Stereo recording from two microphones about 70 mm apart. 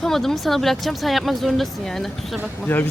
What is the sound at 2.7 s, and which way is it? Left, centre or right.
Speech, left.